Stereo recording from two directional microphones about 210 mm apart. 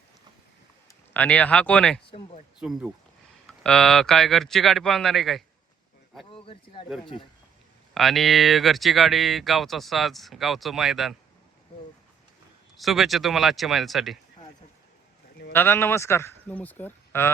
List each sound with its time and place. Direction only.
0.9 s speech: 5° left (ahead or behind)
2.0 s speech: 25° left (ahead or behind)
2.6 s speech: 5° right (ahead or behind)
6.3 s speech: 25° left (ahead or behind)
7.9 s speech: centre (ahead or behind)
12.7 s speech: centre (ahead or behind)
15.5 s a man's voice: 10° left (ahead or behind)